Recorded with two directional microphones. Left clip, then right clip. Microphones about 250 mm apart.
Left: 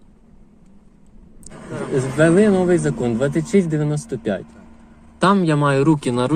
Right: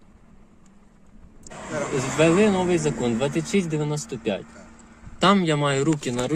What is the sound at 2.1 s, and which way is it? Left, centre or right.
Speech, centre.